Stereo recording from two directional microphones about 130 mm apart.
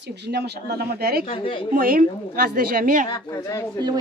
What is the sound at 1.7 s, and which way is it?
A woman's voice, 90° right.